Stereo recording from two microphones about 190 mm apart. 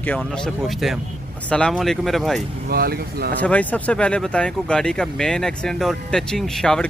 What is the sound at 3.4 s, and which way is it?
Speech, 10° left (ahead or behind).